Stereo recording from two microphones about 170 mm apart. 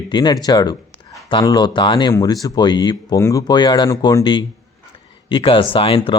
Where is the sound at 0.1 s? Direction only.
25° left (ahead or behind).